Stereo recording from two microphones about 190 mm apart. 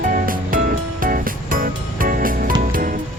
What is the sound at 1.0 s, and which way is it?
Music, 45° right (ahead or behind).